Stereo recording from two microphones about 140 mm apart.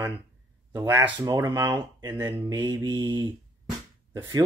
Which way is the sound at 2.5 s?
30° right (ahead or behind).